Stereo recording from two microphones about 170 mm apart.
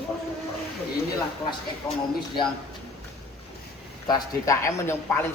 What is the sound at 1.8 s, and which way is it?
Speech, 15° left (ahead or behind).